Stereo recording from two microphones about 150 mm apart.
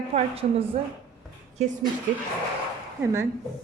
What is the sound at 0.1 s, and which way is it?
Speech, 40° right (ahead or behind).